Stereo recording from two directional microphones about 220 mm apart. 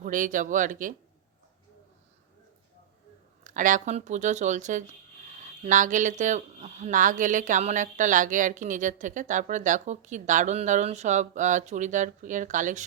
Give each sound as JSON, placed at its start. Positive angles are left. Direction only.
{"t": 0.0, "sound": "speech", "side_deg": -35}
{"t": 3.4, "sound": "speech", "side_deg": -35}